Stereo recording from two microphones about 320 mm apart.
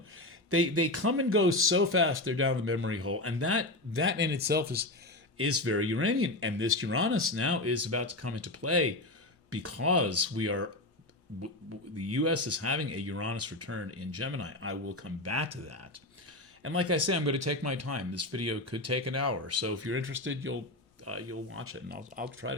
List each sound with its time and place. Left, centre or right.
0.2 s speech: right
5.4 s speech: right
11.9 s speech: right
21.8 s speech: right